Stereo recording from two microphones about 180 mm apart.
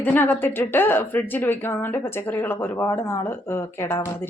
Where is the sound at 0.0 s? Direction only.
10° left (ahead or behind).